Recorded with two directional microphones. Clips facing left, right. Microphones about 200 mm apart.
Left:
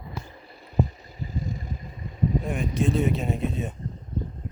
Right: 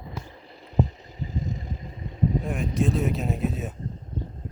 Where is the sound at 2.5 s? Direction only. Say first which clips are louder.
Even; centre (ahead or behind).